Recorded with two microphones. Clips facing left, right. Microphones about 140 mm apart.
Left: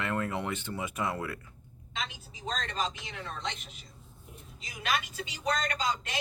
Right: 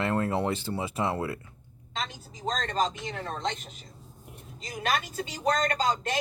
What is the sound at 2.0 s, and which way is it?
A woman's voice, 45° right (ahead or behind).